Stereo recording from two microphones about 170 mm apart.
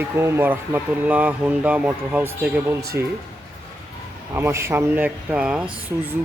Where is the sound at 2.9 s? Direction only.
75° right (ahead or behind).